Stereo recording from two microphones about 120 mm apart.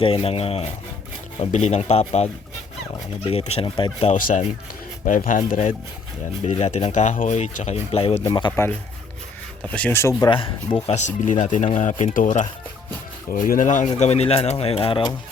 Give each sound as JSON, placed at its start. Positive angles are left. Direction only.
{"t": 0.0, "sound": "speech", "side_deg": 55}
{"t": 1.4, "sound": "speech", "side_deg": 75}
{"t": 4.0, "sound": "speech", "side_deg": 85}
{"t": 6.4, "sound": "speech", "side_deg": 70}
{"t": 8.3, "sound": "speech", "side_deg": 40}
{"t": 9.7, "sound": "speech", "side_deg": 10}
{"t": 10.0, "sound": "speech", "side_deg": 25}
{"t": 10.2, "sound": "speech", "side_deg": 45}
{"t": 10.8, "sound": "speech", "side_deg": 75}